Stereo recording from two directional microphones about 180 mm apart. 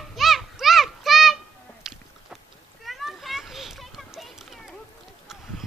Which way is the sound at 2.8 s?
Centre (ahead or behind).